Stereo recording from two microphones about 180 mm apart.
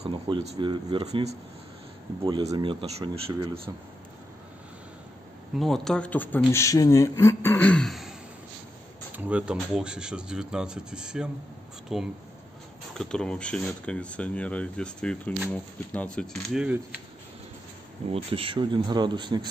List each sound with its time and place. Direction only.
0.0 s speech: 30° right (ahead or behind)
2.2 s speech: 25° right (ahead or behind)
5.6 s a man's voice: centre (ahead or behind)
9.1 s a man's voice: 5° right (ahead or behind)
18.1 s speech: 30° right (ahead or behind)